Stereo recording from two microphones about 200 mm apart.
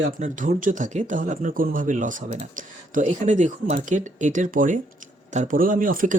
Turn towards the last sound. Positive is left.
turn(degrees=-45)  # may be behind; listen again after turning